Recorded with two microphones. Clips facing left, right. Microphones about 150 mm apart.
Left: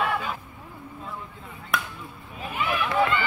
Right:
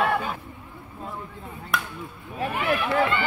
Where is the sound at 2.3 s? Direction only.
70° right (ahead or behind).